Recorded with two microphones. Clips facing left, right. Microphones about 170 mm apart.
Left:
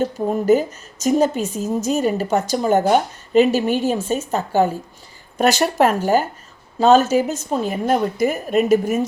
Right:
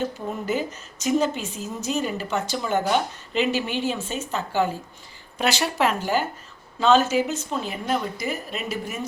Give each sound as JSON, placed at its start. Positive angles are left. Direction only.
{"t": 0.0, "sound": "a woman's voice", "side_deg": 40}